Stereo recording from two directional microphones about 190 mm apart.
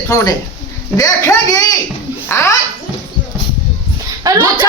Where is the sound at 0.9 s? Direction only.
20° left (ahead or behind).